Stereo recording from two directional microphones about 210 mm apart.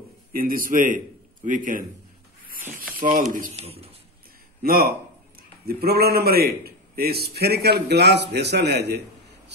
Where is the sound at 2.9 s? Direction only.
40° right (ahead or behind).